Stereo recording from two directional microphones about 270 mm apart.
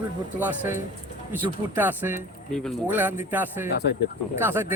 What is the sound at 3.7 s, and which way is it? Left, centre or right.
Speech, left.